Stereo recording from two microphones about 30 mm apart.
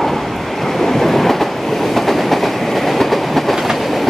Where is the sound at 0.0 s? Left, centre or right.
Centre.